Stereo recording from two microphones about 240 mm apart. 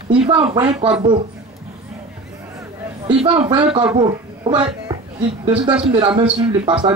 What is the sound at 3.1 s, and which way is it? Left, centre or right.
Speech, right.